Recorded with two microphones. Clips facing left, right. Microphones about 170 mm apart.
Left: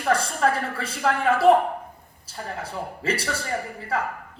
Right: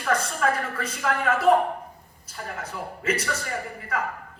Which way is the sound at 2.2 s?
30° left (ahead or behind).